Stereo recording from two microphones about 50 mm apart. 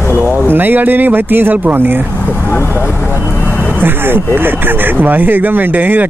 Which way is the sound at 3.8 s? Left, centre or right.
Right.